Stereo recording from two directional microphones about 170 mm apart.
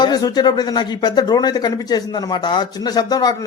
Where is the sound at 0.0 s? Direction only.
25° left (ahead or behind).